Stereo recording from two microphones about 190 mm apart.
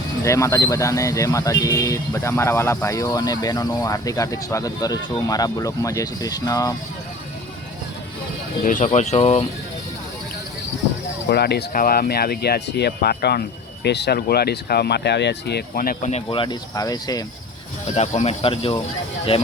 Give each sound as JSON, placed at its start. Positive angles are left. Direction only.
{"t": 0.3, "sound": "speech", "side_deg": 15}
{"t": 8.6, "sound": "speech", "side_deg": 40}
{"t": 11.3, "sound": "speech", "side_deg": 60}
{"t": 16.1, "sound": "speech", "side_deg": 25}
{"t": 17.9, "sound": "speech", "side_deg": 35}